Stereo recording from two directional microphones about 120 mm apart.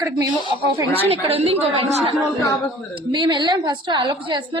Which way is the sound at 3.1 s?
40° right (ahead or behind).